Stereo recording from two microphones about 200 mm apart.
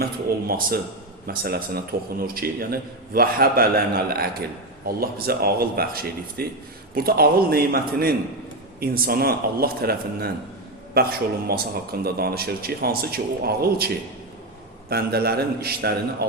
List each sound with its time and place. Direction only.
0.0 s a man's voice: 50° right (ahead or behind)